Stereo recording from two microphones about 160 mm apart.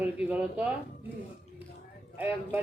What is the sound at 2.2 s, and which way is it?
Speech, 10° right (ahead or behind).